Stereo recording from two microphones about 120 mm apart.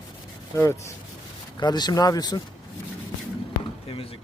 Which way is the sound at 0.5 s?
20° left (ahead or behind).